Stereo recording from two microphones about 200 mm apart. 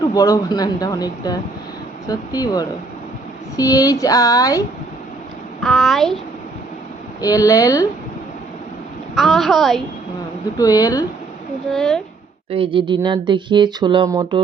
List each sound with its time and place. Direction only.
0.1 s speech: 20° left (ahead or behind)
5.6 s a woman's voice: centre (ahead or behind)
7.2 s speech: 15° left (ahead or behind)
9.1 s a woman's voice: centre (ahead or behind)
10.6 s speech: 20° left (ahead or behind)
11.7 s a woman's voice: centre (ahead or behind)
12.5 s speech: 25° right (ahead or behind)